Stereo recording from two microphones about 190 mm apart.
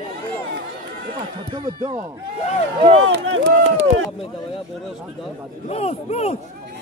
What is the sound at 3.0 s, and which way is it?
Speech, 90° right.